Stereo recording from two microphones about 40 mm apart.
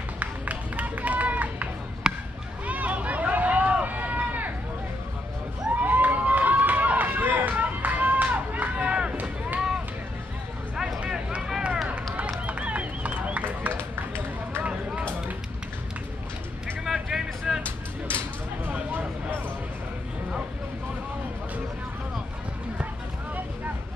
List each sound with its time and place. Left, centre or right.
0.2 s run: right
2.0 s basketball bounce: centre
2.6 s run: right
5.8 s run: right
8.7 s run: right
9.1 s run: right
11.0 s vehicle: right
11.9 s run: right
14.6 s vehicle: right
16.8 s vehicle: centre
18.7 s a sound: right